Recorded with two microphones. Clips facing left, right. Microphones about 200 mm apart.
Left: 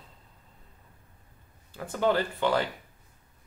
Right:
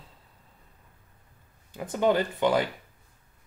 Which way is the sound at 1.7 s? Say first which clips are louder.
Right 2 dB; 20° right (ahead or behind).